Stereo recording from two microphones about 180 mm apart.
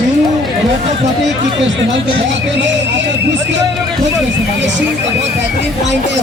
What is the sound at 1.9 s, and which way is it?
Speech, 75° right (ahead or behind).